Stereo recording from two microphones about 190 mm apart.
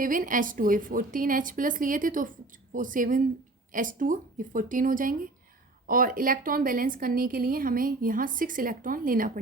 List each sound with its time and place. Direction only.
0.0 s a woman's voice: 45° right (ahead or behind)